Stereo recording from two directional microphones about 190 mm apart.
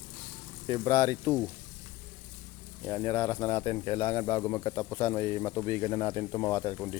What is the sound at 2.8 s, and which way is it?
Speech, 15° left (ahead or behind).